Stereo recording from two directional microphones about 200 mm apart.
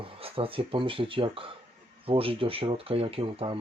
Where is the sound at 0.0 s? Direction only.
30° right (ahead or behind).